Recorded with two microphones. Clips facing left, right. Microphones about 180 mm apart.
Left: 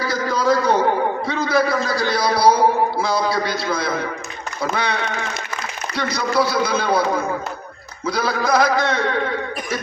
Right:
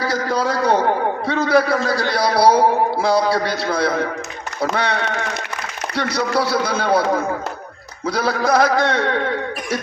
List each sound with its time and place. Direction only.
0.0 s a sound: 65° right (ahead or behind)
4.6 s a man's voice: 75° right (ahead or behind)
8.0 s speech: 65° right (ahead or behind)